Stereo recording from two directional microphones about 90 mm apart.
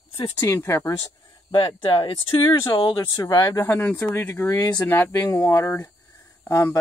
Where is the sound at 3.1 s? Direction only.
45° left (ahead or behind).